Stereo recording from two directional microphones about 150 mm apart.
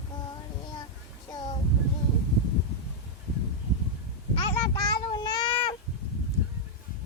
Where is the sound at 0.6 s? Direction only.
30° left (ahead or behind).